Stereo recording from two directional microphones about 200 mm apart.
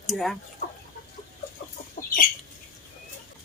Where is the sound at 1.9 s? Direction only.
45° left (ahead or behind).